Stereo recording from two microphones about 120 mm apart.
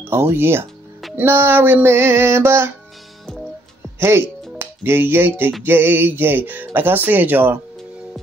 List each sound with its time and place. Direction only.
0.1 s music: 20° right (ahead or behind)
4.0 s speech: 20° right (ahead or behind)